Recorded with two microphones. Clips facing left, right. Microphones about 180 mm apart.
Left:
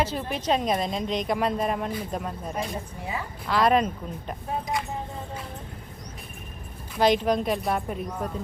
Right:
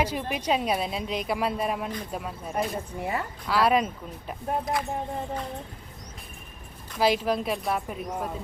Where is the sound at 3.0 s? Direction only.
60° right (ahead or behind).